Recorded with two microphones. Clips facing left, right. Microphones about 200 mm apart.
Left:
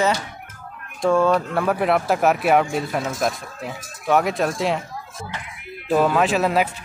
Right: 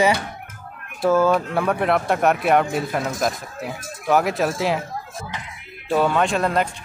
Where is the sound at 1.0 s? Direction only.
5° right (ahead or behind).